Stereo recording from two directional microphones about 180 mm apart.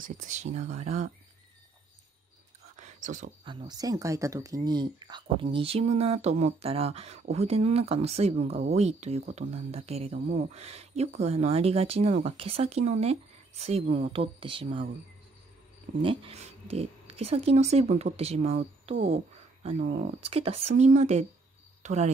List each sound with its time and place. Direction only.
0.0 s speech: 45° right (ahead or behind)
2.7 s whispering: 40° right (ahead or behind)
3.4 s speech: 25° right (ahead or behind)
16.0 s speech: 30° right (ahead or behind)
19.9 s speech: 45° right (ahead or behind)
20.2 s speech: 35° right (ahead or behind)